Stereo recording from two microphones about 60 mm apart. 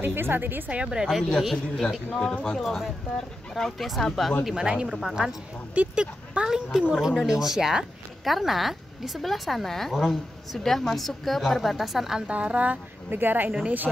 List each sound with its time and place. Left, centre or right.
0.0 s a woman's voice: right
0.7 s speech: centre
1.0 s speech: centre
2.0 s speech: centre
4.6 s speech: centre
12.3 s speech: right
13.1 s a woman's voice: right